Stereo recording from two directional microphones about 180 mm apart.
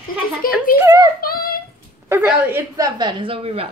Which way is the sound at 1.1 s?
55° left (ahead or behind).